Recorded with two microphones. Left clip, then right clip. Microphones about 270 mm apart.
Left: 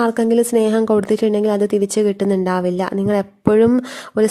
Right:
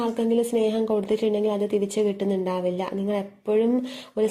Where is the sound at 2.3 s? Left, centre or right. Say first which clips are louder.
Left 8 dB; left.